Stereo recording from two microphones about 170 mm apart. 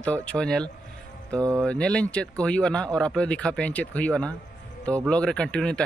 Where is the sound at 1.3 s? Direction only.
15° right (ahead or behind).